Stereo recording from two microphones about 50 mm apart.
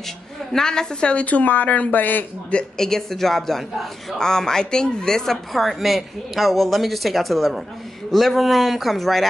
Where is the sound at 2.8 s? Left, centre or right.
Centre.